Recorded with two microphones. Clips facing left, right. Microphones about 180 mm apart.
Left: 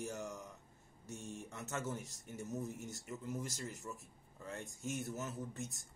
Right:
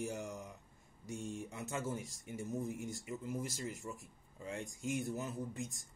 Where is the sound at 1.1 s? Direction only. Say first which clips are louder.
Right 4 dB; 15° right (ahead or behind).